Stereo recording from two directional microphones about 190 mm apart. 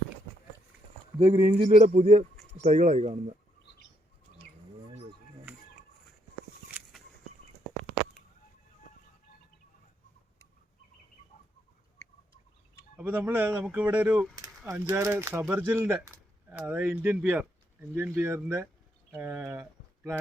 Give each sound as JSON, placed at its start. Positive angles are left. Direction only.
{"t": 1.2, "sound": "speech", "side_deg": -35}
{"t": 1.8, "sound": "speech", "side_deg": -40}
{"t": 2.3, "sound": "a sound", "side_deg": 5}
{"t": 2.6, "sound": "speech", "side_deg": -40}
{"t": 6.7, "sound": "a sound", "side_deg": -10}
{"t": 13.0, "sound": "speech", "side_deg": -10}